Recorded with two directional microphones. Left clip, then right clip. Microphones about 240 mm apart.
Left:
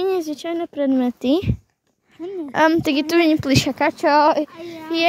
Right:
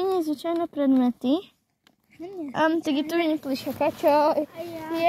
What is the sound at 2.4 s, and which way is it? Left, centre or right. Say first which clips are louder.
Speech: left 7 dB; left.